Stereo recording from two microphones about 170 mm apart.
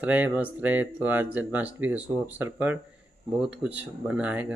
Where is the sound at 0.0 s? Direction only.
10° right (ahead or behind).